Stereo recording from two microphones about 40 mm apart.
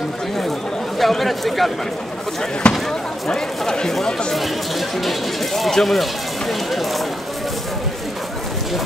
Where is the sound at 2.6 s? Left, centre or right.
Left.